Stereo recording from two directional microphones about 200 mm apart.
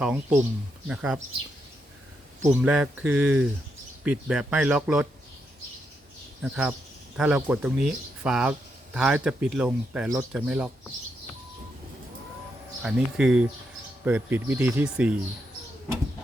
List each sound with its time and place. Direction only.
0.0 s speech: 5° right (ahead or behind)
2.4 s speech: 5° right (ahead or behind)
6.4 s speech: 5° right (ahead or behind)
12.8 s speech: 5° right (ahead or behind)